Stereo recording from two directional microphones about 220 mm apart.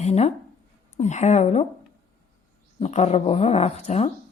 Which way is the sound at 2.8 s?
30° left (ahead or behind).